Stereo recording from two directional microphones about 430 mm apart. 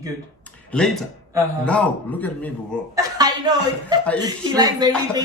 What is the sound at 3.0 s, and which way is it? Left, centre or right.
Speech, centre.